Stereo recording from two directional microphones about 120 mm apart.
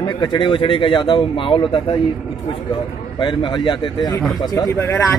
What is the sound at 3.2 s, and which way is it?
A man's voice, 40° left (ahead or behind).